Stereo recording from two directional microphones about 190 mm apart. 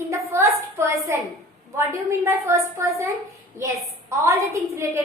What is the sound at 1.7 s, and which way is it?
A woman's voice, 15° right (ahead or behind).